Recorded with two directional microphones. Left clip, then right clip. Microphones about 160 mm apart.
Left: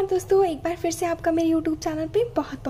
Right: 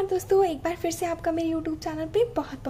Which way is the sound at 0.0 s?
5° left (ahead or behind).